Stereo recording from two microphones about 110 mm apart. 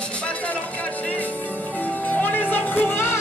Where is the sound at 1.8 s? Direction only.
15° left (ahead or behind).